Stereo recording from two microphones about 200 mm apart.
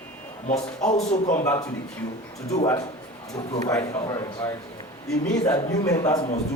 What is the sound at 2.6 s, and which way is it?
A man's voice, 15° left (ahead or behind).